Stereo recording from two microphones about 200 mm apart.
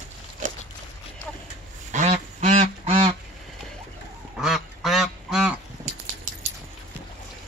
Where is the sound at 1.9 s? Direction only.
35° right (ahead or behind).